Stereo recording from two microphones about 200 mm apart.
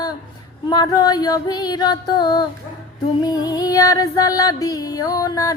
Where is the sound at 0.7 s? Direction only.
20° left (ahead or behind).